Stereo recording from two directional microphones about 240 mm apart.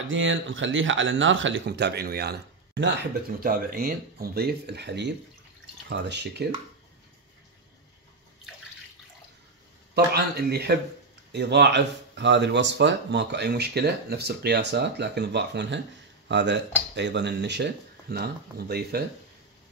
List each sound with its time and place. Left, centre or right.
0.1 s speech: right
9.9 s speech: right